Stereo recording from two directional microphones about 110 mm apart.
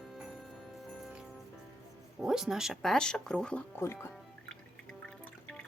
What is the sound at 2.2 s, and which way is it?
Speech, 5° right (ahead or behind).